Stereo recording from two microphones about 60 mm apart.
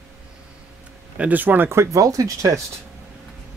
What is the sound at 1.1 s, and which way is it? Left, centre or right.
Speech, right.